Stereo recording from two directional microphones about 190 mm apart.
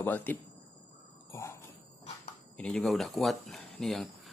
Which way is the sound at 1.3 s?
15° left (ahead or behind).